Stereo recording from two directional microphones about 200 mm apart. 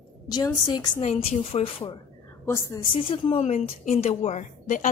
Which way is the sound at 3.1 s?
30° left (ahead or behind).